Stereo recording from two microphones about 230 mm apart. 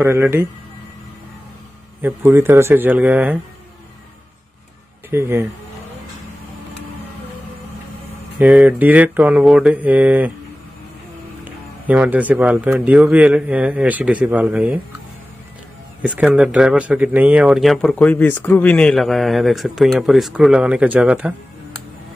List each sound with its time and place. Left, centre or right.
0.0 s speech: centre
2.0 s speech: centre
5.1 s speech: centre
8.4 s speech: centre
11.4 s speech: centre
16.0 s speech: centre